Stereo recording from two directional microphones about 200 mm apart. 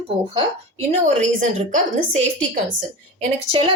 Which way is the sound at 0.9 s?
35° right (ahead or behind).